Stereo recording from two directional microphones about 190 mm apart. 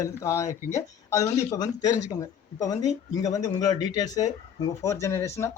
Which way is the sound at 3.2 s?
20° left (ahead or behind).